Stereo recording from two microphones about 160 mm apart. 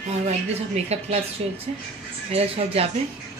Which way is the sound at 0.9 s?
40° right (ahead or behind).